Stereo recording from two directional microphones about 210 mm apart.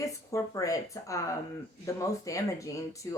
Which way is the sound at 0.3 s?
15° left (ahead or behind).